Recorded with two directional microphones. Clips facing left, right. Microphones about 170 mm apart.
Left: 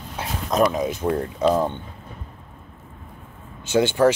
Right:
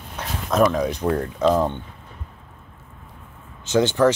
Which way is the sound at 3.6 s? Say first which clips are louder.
Even; 10° left (ahead or behind).